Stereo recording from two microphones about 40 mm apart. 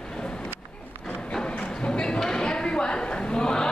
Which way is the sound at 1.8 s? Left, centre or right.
Centre.